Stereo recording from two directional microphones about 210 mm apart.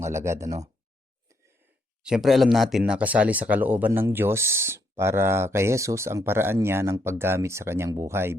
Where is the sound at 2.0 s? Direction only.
Centre (ahead or behind).